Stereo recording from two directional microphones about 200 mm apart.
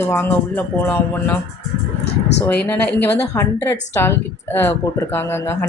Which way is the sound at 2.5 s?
10° left (ahead or behind).